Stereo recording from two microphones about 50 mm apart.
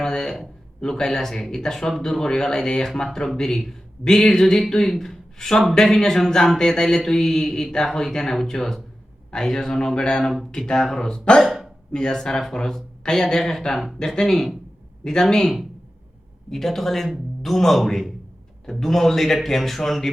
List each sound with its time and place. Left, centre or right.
0.0 s a sound: centre
0.8 s mantra: centre
4.7 s speech: centre
5.7 s mantra: centre
11.4 s hiccup: centre
11.9 s speech: centre
12.1 s mantra: centre
16.5 s speech: centre